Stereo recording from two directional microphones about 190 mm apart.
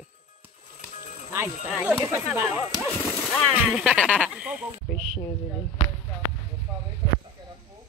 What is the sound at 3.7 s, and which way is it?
Speech, 5° right (ahead or behind).